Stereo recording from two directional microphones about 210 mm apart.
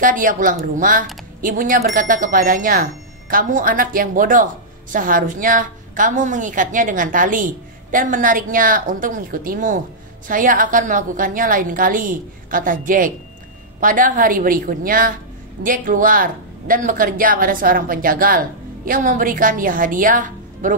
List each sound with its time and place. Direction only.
0.0 s speech: 40° right (ahead or behind)